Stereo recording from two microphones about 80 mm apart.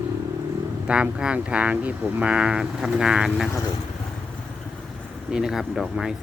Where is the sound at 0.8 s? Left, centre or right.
Centre.